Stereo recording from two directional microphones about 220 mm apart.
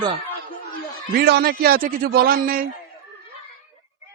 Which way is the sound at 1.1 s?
45° right (ahead or behind).